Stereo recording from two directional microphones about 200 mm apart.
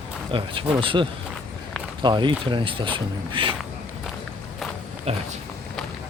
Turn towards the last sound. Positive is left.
turn(degrees=-30)  # may be behind; listen again after turning